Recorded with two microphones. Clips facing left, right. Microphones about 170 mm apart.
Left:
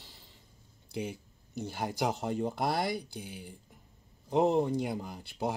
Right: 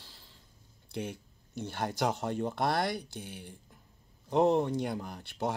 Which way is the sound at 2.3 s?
10° left (ahead or behind).